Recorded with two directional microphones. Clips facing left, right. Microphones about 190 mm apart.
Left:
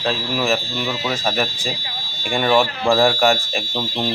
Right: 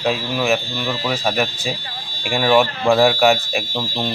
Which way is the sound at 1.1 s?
10° right (ahead or behind).